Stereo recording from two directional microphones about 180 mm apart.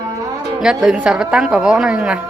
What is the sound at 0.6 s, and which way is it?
A woman's voice, 5° right (ahead or behind).